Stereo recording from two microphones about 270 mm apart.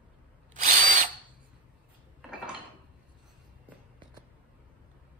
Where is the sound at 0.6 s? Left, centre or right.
Right.